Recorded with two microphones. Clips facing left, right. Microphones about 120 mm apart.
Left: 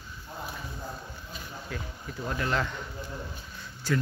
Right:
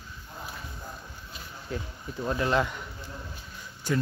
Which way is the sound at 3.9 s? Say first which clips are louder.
Right 1 dB; 20° right (ahead or behind).